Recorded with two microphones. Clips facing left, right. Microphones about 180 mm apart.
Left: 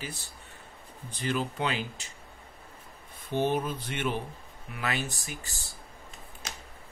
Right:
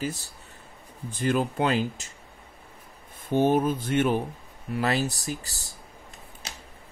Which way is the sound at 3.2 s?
50° right (ahead or behind).